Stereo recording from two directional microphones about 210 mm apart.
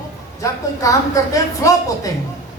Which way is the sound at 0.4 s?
15° left (ahead or behind).